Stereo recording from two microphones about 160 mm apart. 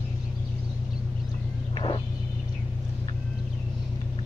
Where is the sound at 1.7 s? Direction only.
30° left (ahead or behind).